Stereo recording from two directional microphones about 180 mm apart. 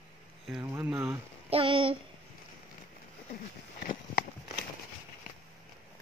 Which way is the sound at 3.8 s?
50° left (ahead or behind).